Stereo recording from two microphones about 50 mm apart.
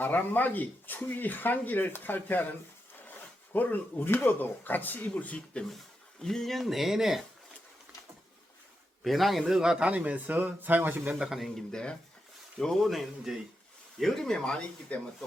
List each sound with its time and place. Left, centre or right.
0.0 s speech: left
6.2 s speech: centre
9.0 s speech: centre
9.4 s speech: centre
9.9 s speech: right
11.1 s speech: centre
11.7 s speech: centre
12.8 s speech: centre
14.9 s speech: left